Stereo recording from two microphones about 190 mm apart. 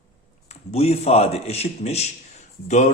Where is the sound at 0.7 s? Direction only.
35° left (ahead or behind).